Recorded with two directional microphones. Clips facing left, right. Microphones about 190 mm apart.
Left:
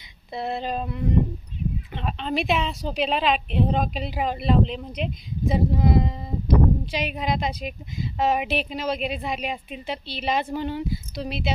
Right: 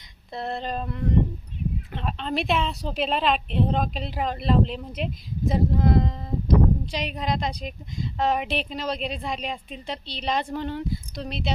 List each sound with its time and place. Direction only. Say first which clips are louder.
0.3 s a woman's voice: left 2 dB; 5° left (ahead or behind)